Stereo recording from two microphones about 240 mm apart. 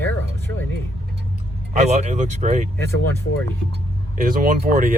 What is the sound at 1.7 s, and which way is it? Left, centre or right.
Speech, right.